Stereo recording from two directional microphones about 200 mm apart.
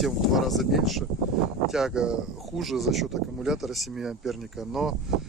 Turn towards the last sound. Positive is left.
turn(degrees=0)  # may be behind; listen again after turning